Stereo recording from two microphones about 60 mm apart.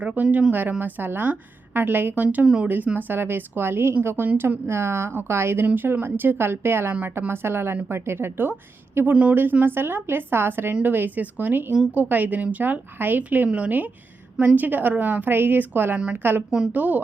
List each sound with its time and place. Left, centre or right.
0.0 s a woman's voice: right